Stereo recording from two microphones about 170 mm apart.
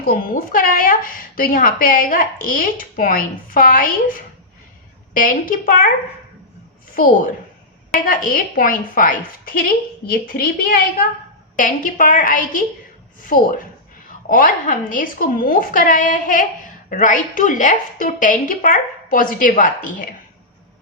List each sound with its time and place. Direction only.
0.0 s a woman's voice: 55° left (ahead or behind)
8.0 s a woman's voice: 55° left (ahead or behind)